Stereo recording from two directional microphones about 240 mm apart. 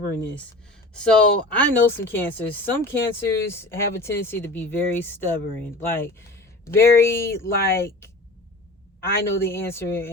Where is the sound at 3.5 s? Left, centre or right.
Centre.